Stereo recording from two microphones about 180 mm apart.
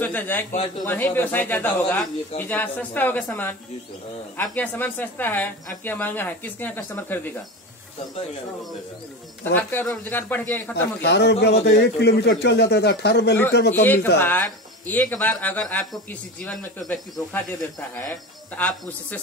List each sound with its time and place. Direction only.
0.0 s speech: 10° left (ahead or behind)
9.4 s speech: 10° left (ahead or behind)
11.0 s speech: 65° left (ahead or behind)
14.1 s speech: 10° left (ahead or behind)